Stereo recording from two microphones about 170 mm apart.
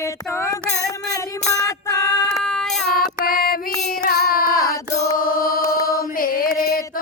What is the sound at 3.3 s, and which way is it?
Female singing, 60° left (ahead or behind).